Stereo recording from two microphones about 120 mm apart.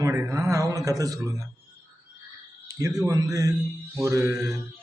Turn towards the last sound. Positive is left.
turn(degrees=-25)  # may be behind; listen again after turning